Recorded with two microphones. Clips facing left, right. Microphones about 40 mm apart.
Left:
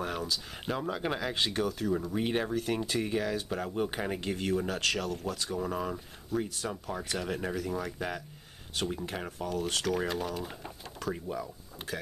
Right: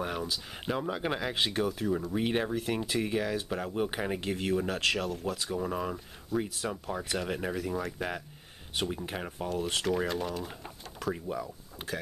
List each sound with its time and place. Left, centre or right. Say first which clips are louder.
0.0 s speech: even; centre
8.8 s speech: right 1 dB; right
9.9 s speech: right 1 dB; centre